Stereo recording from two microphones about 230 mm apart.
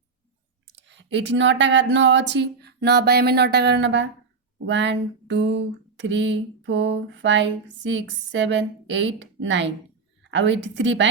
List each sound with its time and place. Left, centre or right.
0.7 s speech: right